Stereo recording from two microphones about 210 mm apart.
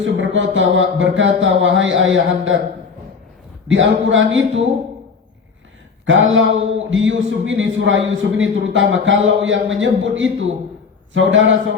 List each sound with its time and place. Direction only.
0.0 s a man's voice: 65° right (ahead or behind)
3.7 s a man's voice: 65° right (ahead or behind)
6.1 s a man's voice: 65° right (ahead or behind)